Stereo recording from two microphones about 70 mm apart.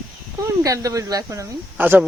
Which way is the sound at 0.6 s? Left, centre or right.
Right.